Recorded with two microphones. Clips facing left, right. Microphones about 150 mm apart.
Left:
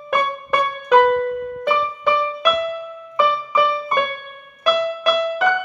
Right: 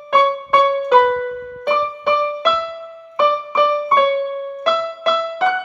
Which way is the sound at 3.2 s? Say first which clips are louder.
Right 2 dB; 30° right (ahead or behind).